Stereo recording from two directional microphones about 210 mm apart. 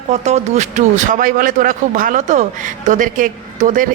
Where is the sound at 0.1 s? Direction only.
30° right (ahead or behind).